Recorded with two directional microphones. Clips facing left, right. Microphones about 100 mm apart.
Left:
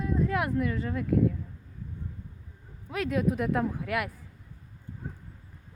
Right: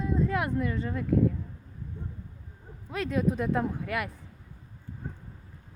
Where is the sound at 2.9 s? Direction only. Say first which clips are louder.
Even; 5° left (ahead or behind).